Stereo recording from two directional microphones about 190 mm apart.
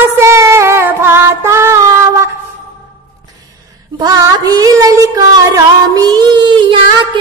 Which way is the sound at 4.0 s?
20° right (ahead or behind).